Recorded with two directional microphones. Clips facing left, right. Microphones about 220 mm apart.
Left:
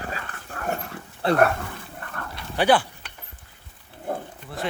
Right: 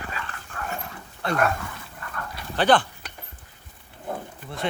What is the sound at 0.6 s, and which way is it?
Dog, 55° left (ahead or behind).